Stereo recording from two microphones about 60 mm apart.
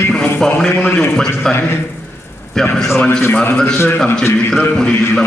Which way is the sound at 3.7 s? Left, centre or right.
Left.